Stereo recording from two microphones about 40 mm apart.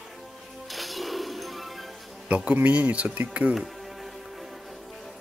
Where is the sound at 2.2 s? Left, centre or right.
Right.